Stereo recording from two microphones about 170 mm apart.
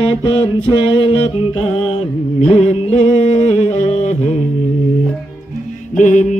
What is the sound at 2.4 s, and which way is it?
Music, 40° left (ahead or behind).